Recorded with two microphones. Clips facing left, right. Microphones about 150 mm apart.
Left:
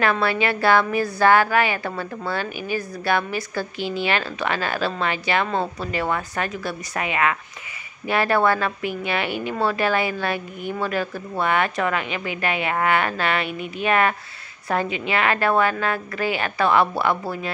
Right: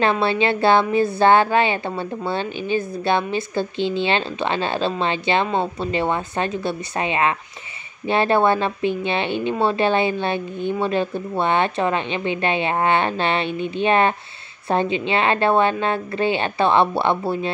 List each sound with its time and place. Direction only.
0.0 s a woman's voice: 25° right (ahead or behind)